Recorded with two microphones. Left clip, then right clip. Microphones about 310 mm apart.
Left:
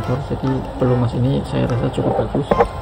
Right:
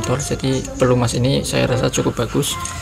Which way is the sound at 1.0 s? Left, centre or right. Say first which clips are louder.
Right 3 dB; centre.